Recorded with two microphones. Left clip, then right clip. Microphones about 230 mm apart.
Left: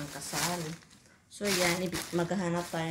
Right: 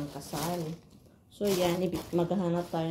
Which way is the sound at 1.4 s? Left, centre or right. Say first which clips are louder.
Right 1 dB; left.